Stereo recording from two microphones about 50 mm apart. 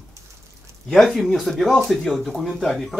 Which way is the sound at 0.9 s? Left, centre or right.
Centre.